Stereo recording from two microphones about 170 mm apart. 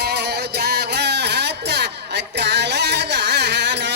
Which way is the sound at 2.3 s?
90° right.